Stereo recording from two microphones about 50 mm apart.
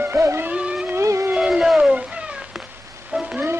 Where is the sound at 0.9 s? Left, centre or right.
Right.